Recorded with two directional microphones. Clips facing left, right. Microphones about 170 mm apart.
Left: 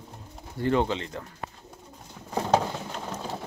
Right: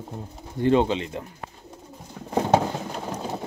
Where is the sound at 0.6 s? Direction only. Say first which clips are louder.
Right 5 dB; 20° right (ahead or behind).